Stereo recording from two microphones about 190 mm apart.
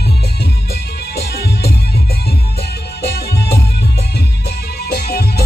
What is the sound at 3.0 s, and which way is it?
Music, 60° left (ahead or behind).